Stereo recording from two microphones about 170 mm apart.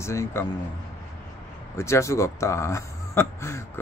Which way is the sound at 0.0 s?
15° left (ahead or behind).